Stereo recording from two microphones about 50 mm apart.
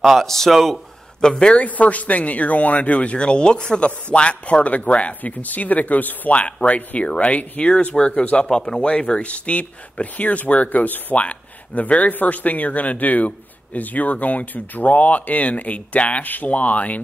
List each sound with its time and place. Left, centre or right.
0.0 s speech: centre
1.2 s speech: centre